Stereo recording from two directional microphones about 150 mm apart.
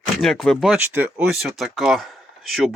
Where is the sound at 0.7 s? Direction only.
15° right (ahead or behind).